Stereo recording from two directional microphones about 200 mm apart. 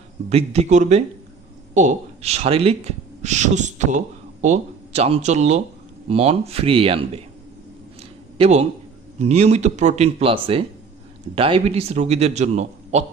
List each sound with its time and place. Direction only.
0.3 s a man's voice: 30° right (ahead or behind)
8.4 s a man's voice: 35° right (ahead or behind)